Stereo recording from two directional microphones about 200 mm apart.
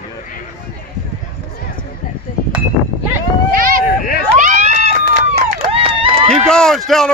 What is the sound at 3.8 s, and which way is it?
Hubbub, 45° left (ahead or behind).